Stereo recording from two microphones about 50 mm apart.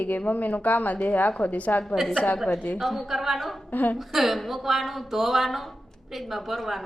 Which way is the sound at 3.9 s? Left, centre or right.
Centre.